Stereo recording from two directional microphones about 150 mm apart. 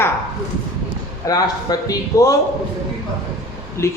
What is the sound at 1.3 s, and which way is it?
A man's voice, 25° left (ahead or behind).